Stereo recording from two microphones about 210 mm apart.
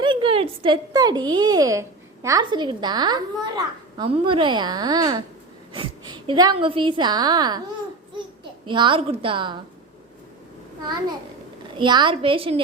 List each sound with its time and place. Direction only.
0.0 s a woman's voice: 25° right (ahead or behind)
8.6 s a woman's voice: 20° right (ahead or behind)
10.8 s a woman's voice: 20° right (ahead or behind)